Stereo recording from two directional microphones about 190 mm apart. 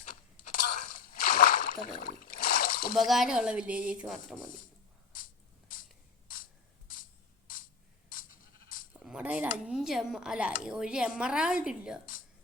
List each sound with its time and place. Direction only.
0.8 s a sound: 50° left (ahead or behind)
2.9 s speech: centre (ahead or behind)
5.1 s a sound: 45° left (ahead or behind)
6.2 s ratchet: 45° left (ahead or behind)
8.1 s sheep: 45° left (ahead or behind)
8.9 s speech: 5° right (ahead or behind)